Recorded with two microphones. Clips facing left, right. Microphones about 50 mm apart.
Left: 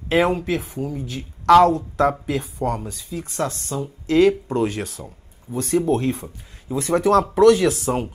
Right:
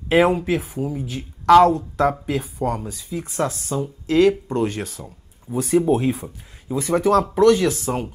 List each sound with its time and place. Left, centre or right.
0.1 s speech: centre